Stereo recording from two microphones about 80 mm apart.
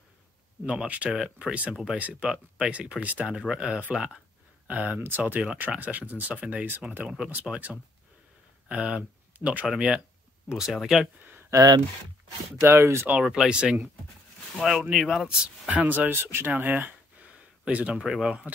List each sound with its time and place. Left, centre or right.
0.7 s speech: centre
4.6 s speech: right; by 11.1 s centre
11.5 s speech: right
12.6 s speech: right
13.3 s speech: centre